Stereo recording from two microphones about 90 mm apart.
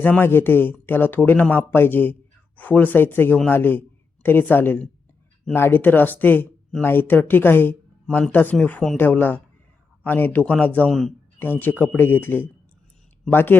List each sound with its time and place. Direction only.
0.0 s a man's voice: 20° left (ahead or behind)
8.0 s speech: 5° left (ahead or behind)
8.3 s a man's voice: 20° left (ahead or behind)